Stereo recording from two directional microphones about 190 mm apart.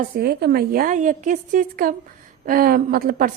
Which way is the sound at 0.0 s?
55° right (ahead or behind).